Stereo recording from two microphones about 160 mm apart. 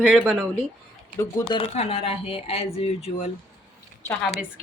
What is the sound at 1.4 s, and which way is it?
Speech, 35° left (ahead or behind).